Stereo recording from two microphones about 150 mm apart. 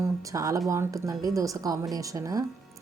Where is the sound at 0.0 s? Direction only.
20° right (ahead or behind).